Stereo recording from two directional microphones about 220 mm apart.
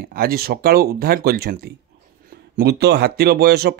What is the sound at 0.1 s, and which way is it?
Speech, 40° right (ahead or behind).